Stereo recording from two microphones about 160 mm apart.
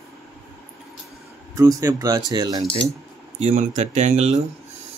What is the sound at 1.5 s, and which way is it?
Speech, 20° right (ahead or behind).